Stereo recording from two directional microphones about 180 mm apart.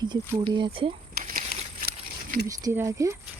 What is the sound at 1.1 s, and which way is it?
Crumpling, 50° right (ahead or behind).